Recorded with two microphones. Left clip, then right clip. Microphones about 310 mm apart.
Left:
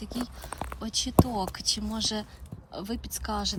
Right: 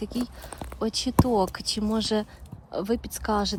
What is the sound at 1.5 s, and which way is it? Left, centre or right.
Speech, centre.